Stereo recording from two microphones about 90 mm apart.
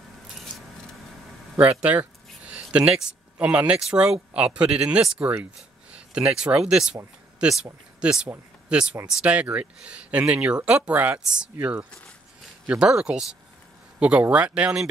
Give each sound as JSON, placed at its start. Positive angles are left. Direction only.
{"t": 1.6, "sound": "a sound", "side_deg": -15}
{"t": 3.3, "sound": "speech", "side_deg": -15}
{"t": 8.0, "sound": "speech", "side_deg": -10}